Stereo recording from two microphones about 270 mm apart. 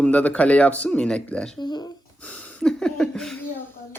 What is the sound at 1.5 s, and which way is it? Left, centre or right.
Speech, centre.